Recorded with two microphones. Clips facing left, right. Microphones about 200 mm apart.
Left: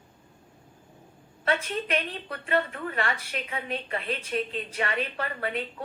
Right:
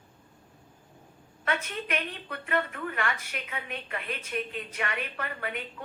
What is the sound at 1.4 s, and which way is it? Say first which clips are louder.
Speech: left 4 dB; 35° left (ahead or behind).